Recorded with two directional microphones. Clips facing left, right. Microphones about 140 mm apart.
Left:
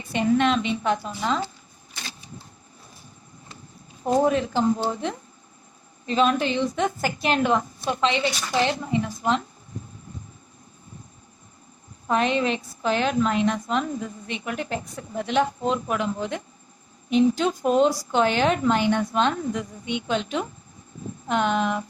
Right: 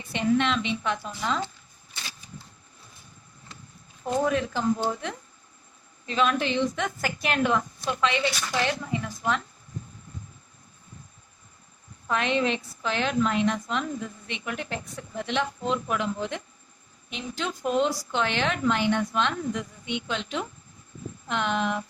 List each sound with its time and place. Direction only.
0.1 s a woman's voice: 45° left (ahead or behind)
4.0 s a woman's voice: 35° left (ahead or behind)
12.0 s a woman's voice: 35° left (ahead or behind)